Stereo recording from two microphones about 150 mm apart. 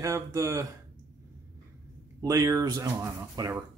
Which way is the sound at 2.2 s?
25° right (ahead or behind).